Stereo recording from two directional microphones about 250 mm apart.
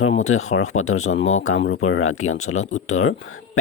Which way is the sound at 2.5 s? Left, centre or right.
Left.